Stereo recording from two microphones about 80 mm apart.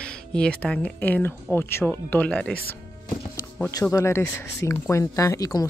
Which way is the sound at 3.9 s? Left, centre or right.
Left.